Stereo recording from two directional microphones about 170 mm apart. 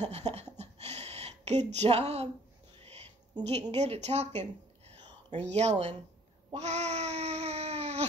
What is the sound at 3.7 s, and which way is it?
Speech, 40° right (ahead or behind).